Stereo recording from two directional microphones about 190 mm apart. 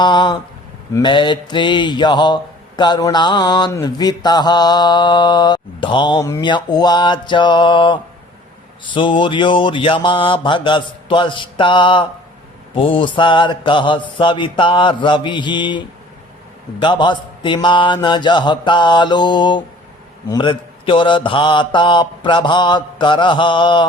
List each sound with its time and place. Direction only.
0.0 s speech: 25° left (ahead or behind)